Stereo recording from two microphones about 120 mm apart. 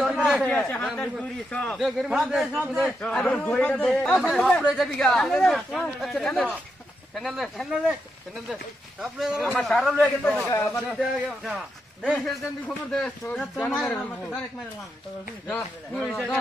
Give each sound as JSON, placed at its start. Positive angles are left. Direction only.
{"t": 0.0, "sound": "a man's voice", "side_deg": 0}
{"t": 1.8, "sound": "a man's voice", "side_deg": -5}
{"t": 3.0, "sound": "a man's voice", "side_deg": 10}
{"t": 9.0, "sound": "a man's voice", "side_deg": -5}
{"t": 10.5, "sound": "speech", "side_deg": 25}
{"t": 10.9, "sound": "a man's voice", "side_deg": -5}
{"t": 15.9, "sound": "a man's voice", "side_deg": 0}